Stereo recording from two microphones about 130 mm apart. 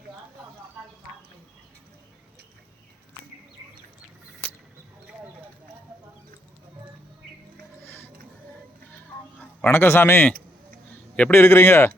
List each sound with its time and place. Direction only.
9.4 s a man's voice: 10° left (ahead or behind)